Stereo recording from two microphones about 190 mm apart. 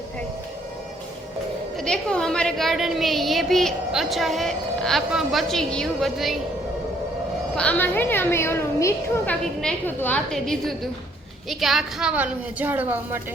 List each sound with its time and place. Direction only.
1.8 s a woman's voice: 5° left (ahead or behind)
7.5 s a woman's voice: 5° left (ahead or behind); by 13.2 s 10° right (ahead or behind)